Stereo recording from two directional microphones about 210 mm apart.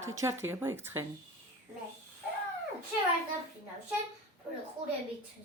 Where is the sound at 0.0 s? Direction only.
15° right (ahead or behind).